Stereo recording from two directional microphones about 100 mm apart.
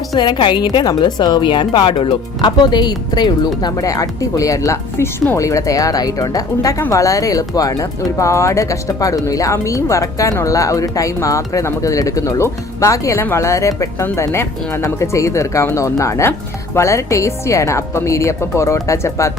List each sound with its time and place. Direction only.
0.1 s a woman's voice: 50° left (ahead or behind); by 19.3 s 30° left (ahead or behind)